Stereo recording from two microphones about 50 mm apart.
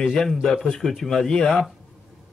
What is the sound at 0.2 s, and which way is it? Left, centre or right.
Speech, centre.